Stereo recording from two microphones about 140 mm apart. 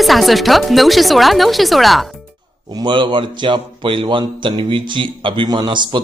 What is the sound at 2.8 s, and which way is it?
A man's voice, 35° right (ahead or behind).